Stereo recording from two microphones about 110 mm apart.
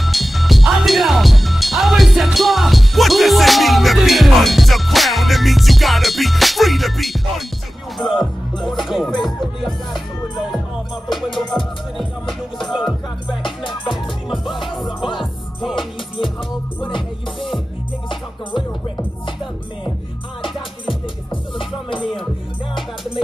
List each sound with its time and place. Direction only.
0.0 s music: centre (ahead or behind)
11.3 s music: centre (ahead or behind)
13.4 s music: 45° left (ahead or behind)
14.3 s music: centre (ahead or behind)
14.9 s music: 50° left (ahead or behind)
21.5 s music: 50° left (ahead or behind)